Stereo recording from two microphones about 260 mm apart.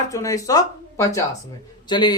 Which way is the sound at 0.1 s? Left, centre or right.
Centre.